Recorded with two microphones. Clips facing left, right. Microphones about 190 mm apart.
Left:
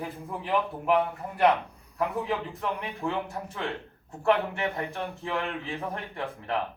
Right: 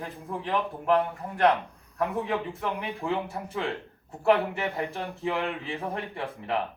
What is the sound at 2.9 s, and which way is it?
Speech, 15° right (ahead or behind).